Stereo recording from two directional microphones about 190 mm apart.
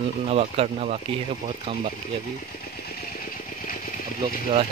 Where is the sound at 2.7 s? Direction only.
55° left (ahead or behind).